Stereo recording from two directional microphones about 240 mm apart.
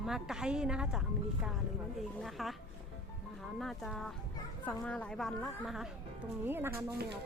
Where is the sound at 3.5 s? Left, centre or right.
Centre.